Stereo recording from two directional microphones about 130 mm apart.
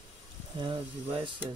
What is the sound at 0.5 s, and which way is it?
Speech, 35° right (ahead or behind).